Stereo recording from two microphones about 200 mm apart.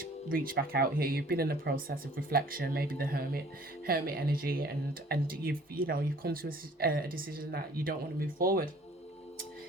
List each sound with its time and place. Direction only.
0.3 s speech: 45° right (ahead or behind)